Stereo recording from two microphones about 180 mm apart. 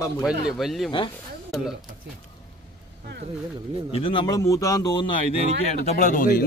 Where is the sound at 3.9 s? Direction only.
30° left (ahead or behind).